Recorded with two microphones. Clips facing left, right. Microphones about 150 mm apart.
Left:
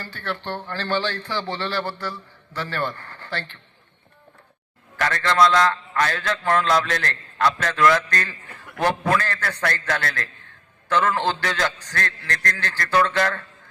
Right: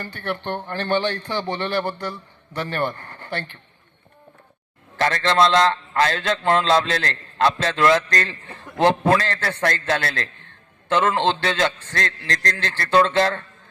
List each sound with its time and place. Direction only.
0.0 s a man's voice: 20° right (ahead or behind)
4.9 s a man's voice: 25° right (ahead or behind)